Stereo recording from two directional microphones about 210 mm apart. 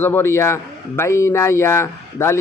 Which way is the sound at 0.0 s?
10° left (ahead or behind).